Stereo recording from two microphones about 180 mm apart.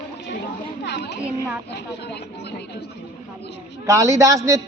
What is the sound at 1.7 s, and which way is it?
Speech, 70° left (ahead or behind).